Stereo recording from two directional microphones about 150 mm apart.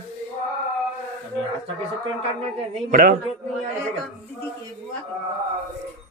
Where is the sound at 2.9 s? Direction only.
70° right (ahead or behind).